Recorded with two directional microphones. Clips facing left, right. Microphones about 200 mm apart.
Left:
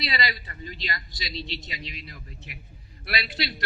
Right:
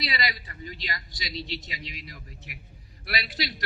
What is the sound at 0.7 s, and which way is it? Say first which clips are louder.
A man's voice: left 3 dB; 25° left (ahead or behind).